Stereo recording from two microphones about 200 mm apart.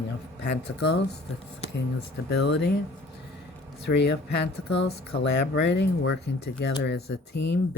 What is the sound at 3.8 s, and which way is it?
Speech, 55° left (ahead or behind).